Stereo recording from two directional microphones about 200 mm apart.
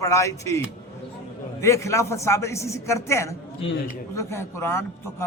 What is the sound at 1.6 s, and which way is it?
A man's voice, 15° left (ahead or behind).